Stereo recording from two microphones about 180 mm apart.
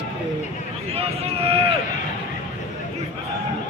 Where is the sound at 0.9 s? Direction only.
35° right (ahead or behind).